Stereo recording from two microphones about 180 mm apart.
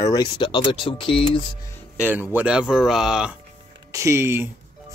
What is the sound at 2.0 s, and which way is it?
Speech, 10° right (ahead or behind).